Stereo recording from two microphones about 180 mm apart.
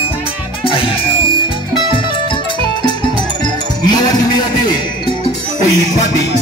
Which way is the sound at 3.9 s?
20° left (ahead or behind).